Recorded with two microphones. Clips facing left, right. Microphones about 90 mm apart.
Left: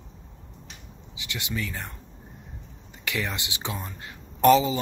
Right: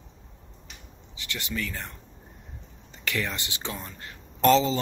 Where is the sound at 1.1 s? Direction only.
15° left (ahead or behind).